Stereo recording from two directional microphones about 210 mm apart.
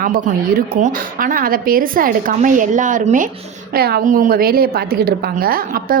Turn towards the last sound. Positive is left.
turn(degrees=-45)  # may be behind; listen again after turning